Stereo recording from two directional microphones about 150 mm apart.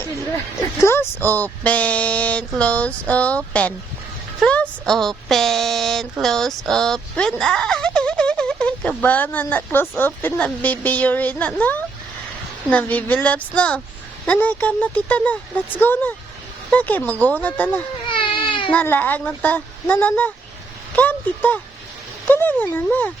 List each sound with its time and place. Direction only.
0.8 s speech: 15° left (ahead or behind)
18.0 s baby cry: 35° left (ahead or behind)
18.7 s speech: 10° left (ahead or behind)